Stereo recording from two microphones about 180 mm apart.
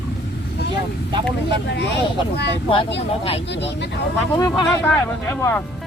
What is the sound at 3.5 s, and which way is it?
Speech, 75° left (ahead or behind).